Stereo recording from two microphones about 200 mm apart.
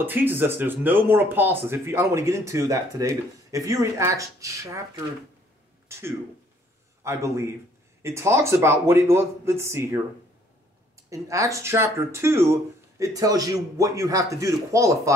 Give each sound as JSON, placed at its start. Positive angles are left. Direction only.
{"t": 0.0, "sound": "a man's voice", "side_deg": -10}
{"t": 11.1, "sound": "speech", "side_deg": -15}